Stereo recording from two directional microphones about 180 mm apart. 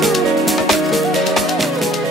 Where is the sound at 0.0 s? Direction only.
Centre (ahead or behind).